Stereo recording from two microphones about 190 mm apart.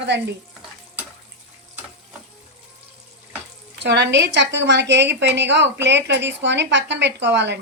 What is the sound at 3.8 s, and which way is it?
Speech, 65° right (ahead or behind).